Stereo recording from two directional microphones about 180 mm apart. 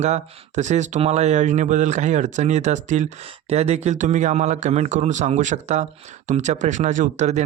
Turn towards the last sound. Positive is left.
turn(degrees=-40)  # may be behind; listen again after turning